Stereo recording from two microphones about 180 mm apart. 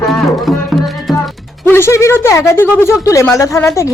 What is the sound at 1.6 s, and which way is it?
Speech, 15° left (ahead or behind).